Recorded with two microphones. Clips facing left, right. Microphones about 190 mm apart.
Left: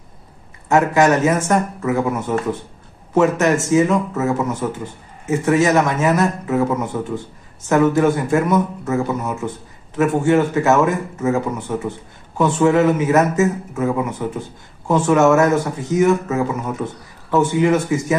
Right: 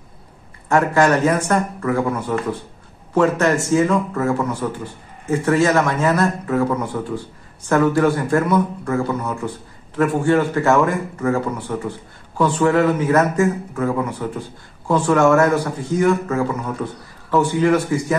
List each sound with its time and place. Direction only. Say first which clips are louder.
0.7 s a man's voice: left 1 dB; 20° left (ahead or behind)